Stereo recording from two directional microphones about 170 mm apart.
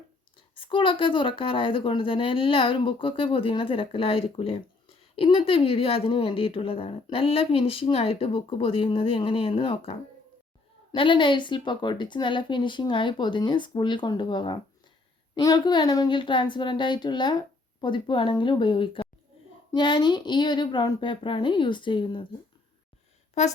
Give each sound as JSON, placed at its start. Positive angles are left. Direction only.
{"t": 0.5, "sound": "a woman's voice", "side_deg": 30}
{"t": 23.4, "sound": "a woman's voice", "side_deg": 40}